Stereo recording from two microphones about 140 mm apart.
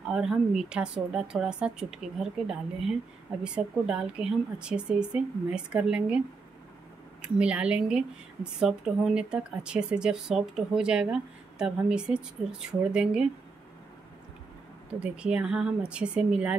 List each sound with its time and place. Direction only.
0.1 s speech: 5° right (ahead or behind)
14.9 s speech: 5° right (ahead or behind)